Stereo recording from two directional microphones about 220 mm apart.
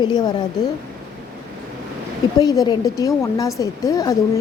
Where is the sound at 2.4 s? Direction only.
15° left (ahead or behind).